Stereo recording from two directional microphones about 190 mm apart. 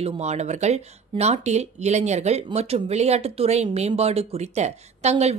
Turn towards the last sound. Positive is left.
turn(degrees=-35)  # may be behind; listen again after turning